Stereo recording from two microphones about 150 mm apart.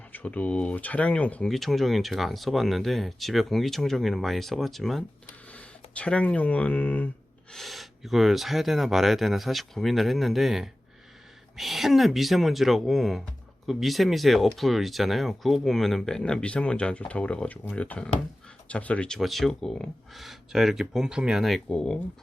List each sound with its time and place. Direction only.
0.1 s speech: 10° left (ahead or behind)
7.5 s speech: centre (ahead or behind)